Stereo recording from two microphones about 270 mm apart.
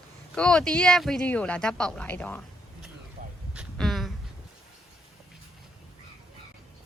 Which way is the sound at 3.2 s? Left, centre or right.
Right.